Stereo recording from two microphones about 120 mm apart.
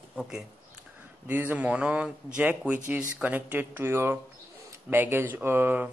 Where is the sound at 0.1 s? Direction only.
5° right (ahead or behind).